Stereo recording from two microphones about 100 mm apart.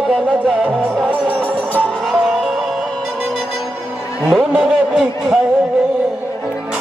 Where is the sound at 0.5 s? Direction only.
15° right (ahead or behind).